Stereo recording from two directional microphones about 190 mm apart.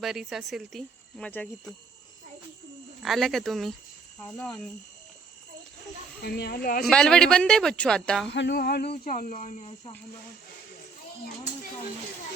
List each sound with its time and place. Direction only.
0.0 s speech: centre (ahead or behind)
3.0 s speech: centre (ahead or behind)
6.2 s speech: 60° left (ahead or behind)
6.8 s speech: 5° left (ahead or behind)
8.3 s speech: 65° left (ahead or behind); by 9.9 s 35° left (ahead or behind)